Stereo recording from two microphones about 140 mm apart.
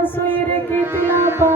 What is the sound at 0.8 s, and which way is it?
Music, 15° right (ahead or behind).